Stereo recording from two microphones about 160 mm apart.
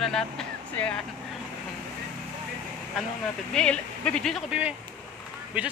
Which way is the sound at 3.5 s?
5° left (ahead or behind).